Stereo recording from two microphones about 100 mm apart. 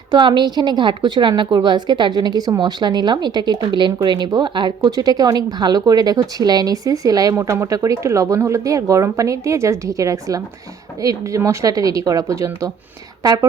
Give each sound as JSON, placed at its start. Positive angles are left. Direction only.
{"t": 0.1, "sound": "a woman's voice", "side_deg": -50}